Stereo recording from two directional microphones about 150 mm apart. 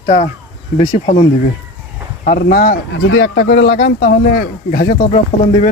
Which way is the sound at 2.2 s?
80° left.